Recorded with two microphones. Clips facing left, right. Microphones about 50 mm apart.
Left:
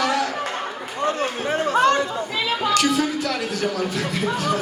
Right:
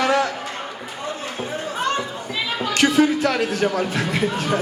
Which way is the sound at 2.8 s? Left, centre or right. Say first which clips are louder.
Right 8 dB; right.